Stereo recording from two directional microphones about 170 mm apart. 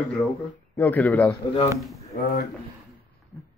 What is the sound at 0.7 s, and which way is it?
A man's voice, 10° left (ahead or behind).